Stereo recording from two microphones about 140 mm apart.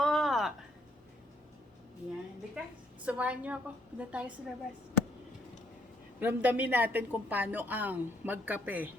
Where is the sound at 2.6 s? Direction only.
10° right (ahead or behind).